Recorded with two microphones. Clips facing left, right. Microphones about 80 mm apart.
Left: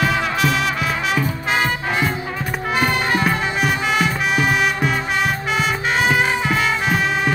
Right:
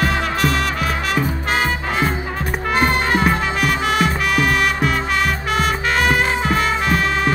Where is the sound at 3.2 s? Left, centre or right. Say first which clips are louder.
Right 1 dB; right.